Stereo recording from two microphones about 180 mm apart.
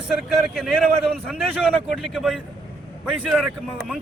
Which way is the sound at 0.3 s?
Centre (ahead or behind).